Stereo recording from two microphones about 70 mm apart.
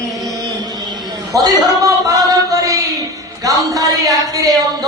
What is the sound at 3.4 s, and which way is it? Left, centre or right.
A man's voice, right.